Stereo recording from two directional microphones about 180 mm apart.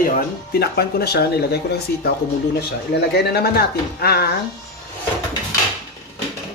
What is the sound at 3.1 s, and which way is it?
Speech, 60° left (ahead or behind).